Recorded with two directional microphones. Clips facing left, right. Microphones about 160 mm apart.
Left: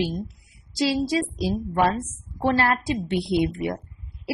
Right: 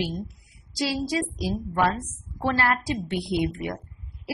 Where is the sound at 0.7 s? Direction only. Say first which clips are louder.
Left 4 dB; 25° left (ahead or behind).